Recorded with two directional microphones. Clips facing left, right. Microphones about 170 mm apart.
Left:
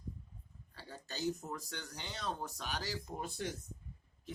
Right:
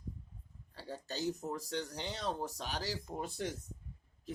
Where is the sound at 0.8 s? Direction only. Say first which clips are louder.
Right 2 dB; 35° right (ahead or behind).